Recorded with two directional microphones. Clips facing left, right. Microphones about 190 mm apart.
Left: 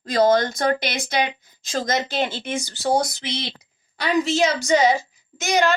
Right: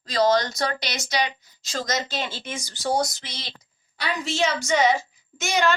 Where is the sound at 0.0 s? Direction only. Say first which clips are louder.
Left 3 dB; 50° left (ahead or behind).